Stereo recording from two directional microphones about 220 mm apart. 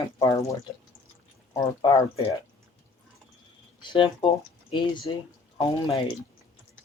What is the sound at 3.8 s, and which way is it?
Speech, 20° left (ahead or behind).